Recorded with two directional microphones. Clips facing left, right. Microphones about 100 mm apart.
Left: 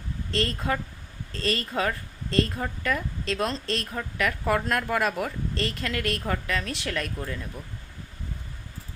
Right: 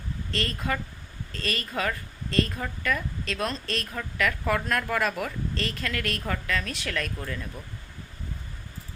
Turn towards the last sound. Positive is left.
turn(degrees=20)  # may be behind; listen again after turning